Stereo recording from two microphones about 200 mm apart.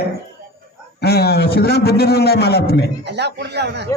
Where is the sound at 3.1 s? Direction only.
60° right (ahead or behind).